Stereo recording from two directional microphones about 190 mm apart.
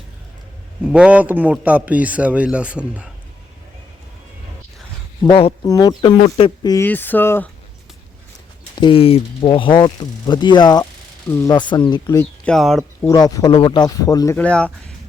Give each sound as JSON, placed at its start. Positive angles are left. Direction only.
{"t": 0.9, "sound": "a man's voice", "side_deg": -5}
{"t": 5.2, "sound": "speech", "side_deg": 30}
{"t": 5.6, "sound": "speech", "side_deg": 20}
{"t": 6.0, "sound": "speech", "side_deg": 30}
{"t": 6.8, "sound": "speech", "side_deg": 10}
{"t": 8.7, "sound": "speech", "side_deg": 25}
{"t": 12.5, "sound": "speech", "side_deg": 0}
{"t": 13.1, "sound": "speech", "side_deg": 20}
{"t": 14.3, "sound": "speech", "side_deg": 5}